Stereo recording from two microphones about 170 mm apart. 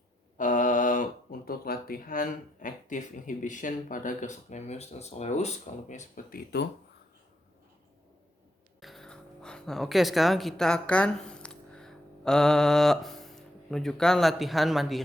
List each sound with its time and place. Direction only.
0.3 s speech: 50° left (ahead or behind)
6.3 s speech: 75° left (ahead or behind)
8.8 s speech: centre (ahead or behind)